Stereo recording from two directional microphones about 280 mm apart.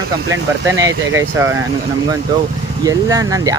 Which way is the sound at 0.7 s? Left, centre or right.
Centre.